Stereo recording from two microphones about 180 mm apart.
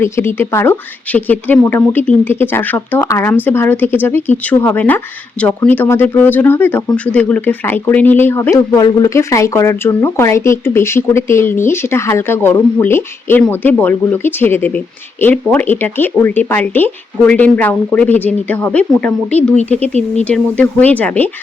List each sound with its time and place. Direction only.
0.0 s speech: 15° left (ahead or behind)
19.8 s speech: 40° right (ahead or behind)
20.2 s speech: 5° left (ahead or behind)